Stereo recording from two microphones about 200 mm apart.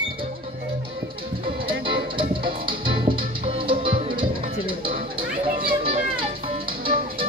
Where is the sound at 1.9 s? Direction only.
25° right (ahead or behind).